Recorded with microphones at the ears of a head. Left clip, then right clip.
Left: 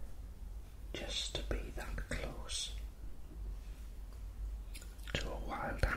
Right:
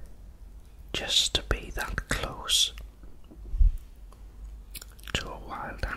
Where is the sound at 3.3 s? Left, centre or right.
Right.